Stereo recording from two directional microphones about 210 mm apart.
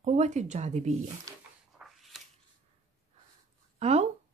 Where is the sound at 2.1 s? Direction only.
Centre (ahead or behind).